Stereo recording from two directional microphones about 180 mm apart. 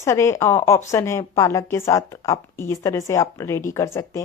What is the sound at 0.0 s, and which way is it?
Speech, 15° left (ahead or behind).